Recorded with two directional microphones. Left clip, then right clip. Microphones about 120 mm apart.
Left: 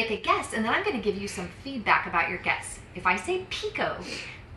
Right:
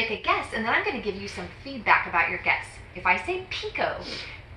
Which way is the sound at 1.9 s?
10° left (ahead or behind).